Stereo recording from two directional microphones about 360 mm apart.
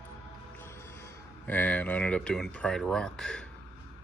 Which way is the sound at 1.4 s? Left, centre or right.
Centre.